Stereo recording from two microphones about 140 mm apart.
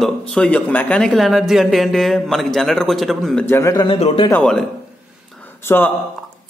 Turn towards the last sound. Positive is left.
turn(degrees=15)  # may be behind; listen again after turning